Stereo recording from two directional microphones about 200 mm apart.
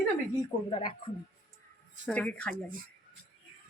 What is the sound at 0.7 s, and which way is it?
Speech, 25° left (ahead or behind).